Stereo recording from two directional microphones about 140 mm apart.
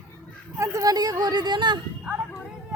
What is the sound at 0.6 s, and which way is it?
Speech, 25° right (ahead or behind).